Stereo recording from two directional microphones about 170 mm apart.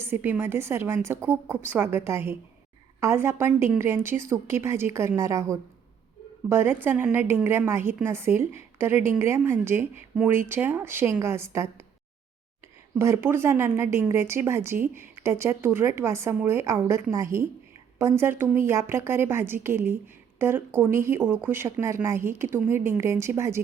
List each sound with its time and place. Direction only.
0.0 s a woman's voice: 10° right (ahead or behind)
13.0 s a woman's voice: 15° right (ahead or behind)